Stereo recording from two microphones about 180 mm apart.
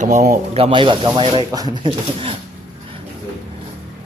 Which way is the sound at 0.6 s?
25° right (ahead or behind).